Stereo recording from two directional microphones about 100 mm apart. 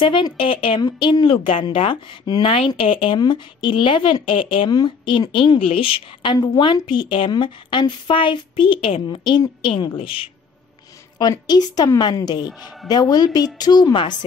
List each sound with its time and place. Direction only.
0.0 s speech: 55° left (ahead or behind)
0.7 s speech: 50° left (ahead or behind)
3.2 s speech: 50° left (ahead or behind)
4.6 s a woman's voice: 45° left (ahead or behind)
6.3 s a woman's voice: 45° left (ahead or behind); by 10.3 s 65° left (ahead or behind)
11.1 s a woman's voice: 45° left (ahead or behind)